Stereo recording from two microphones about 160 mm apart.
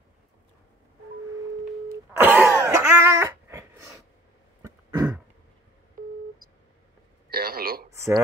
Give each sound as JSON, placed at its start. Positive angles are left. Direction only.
{"t": 2.1, "sound": "a sound", "side_deg": -10}
{"t": 6.0, "sound": "busy signal", "side_deg": -60}
{"t": 7.2, "sound": "radio", "side_deg": -75}